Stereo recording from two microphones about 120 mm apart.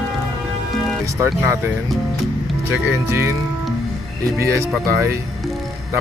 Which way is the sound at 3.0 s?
20° right (ahead or behind).